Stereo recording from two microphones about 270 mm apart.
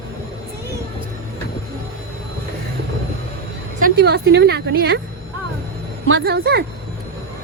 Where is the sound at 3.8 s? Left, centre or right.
Right.